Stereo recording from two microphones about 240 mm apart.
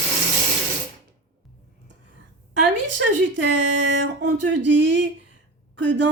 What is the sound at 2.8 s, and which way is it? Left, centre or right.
Speech, right.